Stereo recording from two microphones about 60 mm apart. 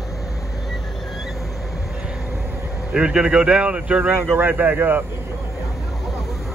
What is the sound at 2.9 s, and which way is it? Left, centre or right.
A man's voice, centre.